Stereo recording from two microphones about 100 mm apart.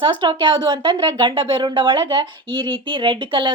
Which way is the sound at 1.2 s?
55° right (ahead or behind).